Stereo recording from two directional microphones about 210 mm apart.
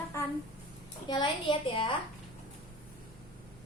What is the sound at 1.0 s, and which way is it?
Speech, 20° left (ahead or behind).